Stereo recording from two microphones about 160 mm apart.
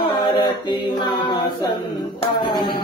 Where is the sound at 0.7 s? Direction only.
30° left (ahead or behind).